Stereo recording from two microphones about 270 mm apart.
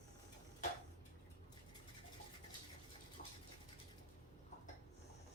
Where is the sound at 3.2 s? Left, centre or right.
Left.